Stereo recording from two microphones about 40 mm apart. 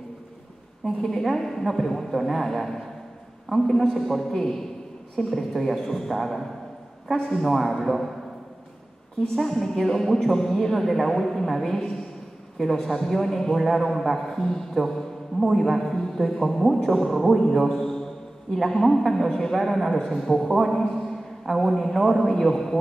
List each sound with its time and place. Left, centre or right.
0.8 s a man's voice: centre
7.2 s a man's voice: centre
7.4 s a man's voice: centre
9.5 s a man's voice: centre